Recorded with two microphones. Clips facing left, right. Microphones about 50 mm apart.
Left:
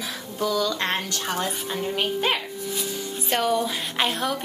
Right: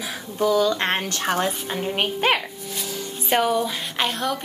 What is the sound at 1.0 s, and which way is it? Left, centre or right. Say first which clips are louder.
Speech: right 4 dB; right.